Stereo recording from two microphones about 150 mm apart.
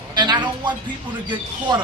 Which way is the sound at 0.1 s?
30° right (ahead or behind).